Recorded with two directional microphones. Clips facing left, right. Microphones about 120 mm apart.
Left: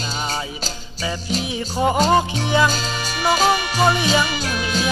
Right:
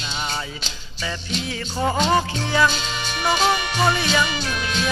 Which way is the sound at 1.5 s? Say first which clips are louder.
Left 3 dB; 15° left (ahead or behind).